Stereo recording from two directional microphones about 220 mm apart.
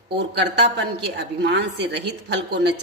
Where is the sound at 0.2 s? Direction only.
50° right (ahead or behind).